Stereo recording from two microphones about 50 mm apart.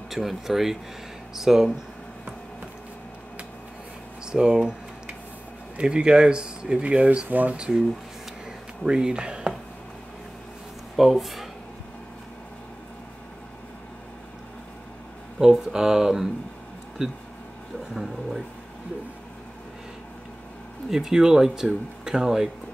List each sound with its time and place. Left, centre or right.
0.1 s speech: centre
4.3 s a sound: centre
5.8 s speech: centre
7.2 s speech: right
7.5 s speech: centre
8.8 s speech: centre
11.0 s speech: centre
15.3 s speech: centre
20.9 s speech: centre